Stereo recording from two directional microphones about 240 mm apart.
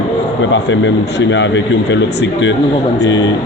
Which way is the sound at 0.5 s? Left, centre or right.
Left.